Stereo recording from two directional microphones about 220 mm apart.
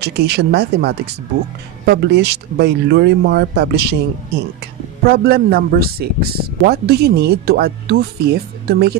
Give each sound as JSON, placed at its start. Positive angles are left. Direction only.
{"t": 0.0, "sound": "a man's voice", "side_deg": -50}
{"t": 5.0, "sound": "a man's voice", "side_deg": -45}